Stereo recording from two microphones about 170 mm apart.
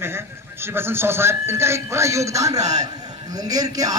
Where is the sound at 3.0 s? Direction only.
20° right (ahead or behind).